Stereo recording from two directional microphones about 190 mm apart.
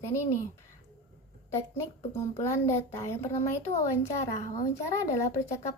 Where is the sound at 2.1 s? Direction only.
15° left (ahead or behind).